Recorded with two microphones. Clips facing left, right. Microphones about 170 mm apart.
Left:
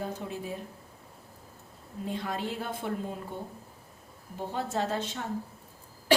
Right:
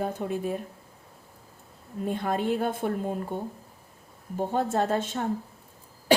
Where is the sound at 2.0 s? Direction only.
50° right (ahead or behind).